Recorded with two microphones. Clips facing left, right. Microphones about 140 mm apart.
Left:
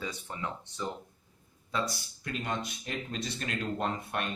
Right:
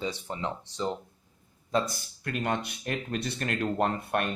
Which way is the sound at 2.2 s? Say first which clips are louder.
Right 5 dB; 60° right (ahead or behind).